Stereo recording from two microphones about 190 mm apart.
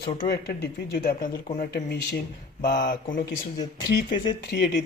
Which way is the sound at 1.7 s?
60° left (ahead or behind).